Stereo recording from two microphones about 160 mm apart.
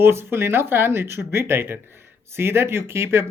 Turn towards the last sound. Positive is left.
turn(degrees=-15)  # may be behind; listen again after turning